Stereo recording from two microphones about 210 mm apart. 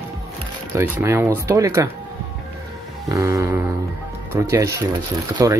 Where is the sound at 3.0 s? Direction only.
15° right (ahead or behind).